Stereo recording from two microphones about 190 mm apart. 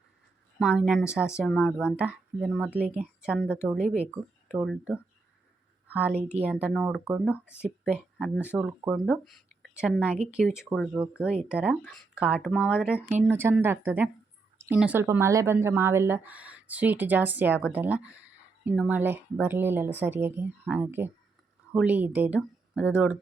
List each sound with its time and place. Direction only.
0.6 s speech: 5° right (ahead or behind)
6.1 s speech: 35° right (ahead or behind)
6.4 s speech: 5° right (ahead or behind)